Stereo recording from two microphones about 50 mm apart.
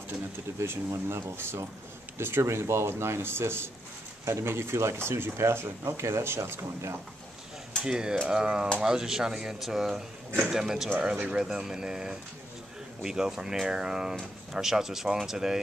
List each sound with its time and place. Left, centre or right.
0.7 s speech: right
2.4 s speech: right
7.8 s speech: centre
11.0 s speech: right